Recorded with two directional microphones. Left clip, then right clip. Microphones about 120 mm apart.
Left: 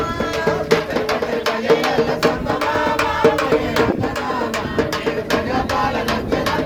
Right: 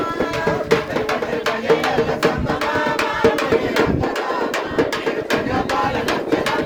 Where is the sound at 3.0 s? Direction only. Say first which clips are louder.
Left 2 dB; 10° right (ahead or behind).